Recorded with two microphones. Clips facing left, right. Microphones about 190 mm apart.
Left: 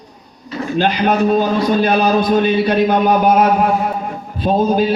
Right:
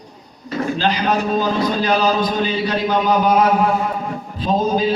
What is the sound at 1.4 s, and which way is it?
A man's voice, 55° left (ahead or behind).